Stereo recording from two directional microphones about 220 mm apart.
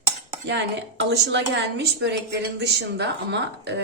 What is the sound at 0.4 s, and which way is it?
A woman's voice, 50° right (ahead or behind).